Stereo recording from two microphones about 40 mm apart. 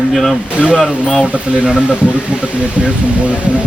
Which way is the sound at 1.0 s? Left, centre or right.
Centre.